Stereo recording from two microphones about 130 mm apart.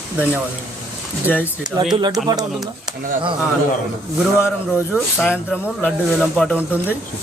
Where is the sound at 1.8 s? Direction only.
30° right (ahead or behind).